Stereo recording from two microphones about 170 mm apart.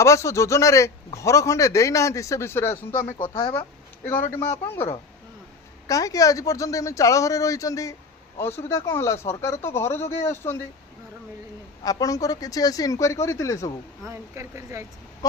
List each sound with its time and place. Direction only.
0.0 s a man's voice: 15° left (ahead or behind)
2.9 s speech: 50° left (ahead or behind)
4.0 s a man's voice: 15° left (ahead or behind)
5.9 s a man's voice: 20° left (ahead or behind)
11.8 s speech: 20° left (ahead or behind)
14.0 s speech: 15° right (ahead or behind)
15.2 s a sound: 20° left (ahead or behind)